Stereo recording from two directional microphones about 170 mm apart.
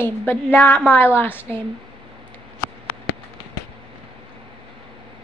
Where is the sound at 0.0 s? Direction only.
15° left (ahead or behind).